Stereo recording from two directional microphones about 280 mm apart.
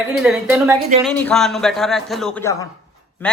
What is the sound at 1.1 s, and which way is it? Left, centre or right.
A man's voice, centre.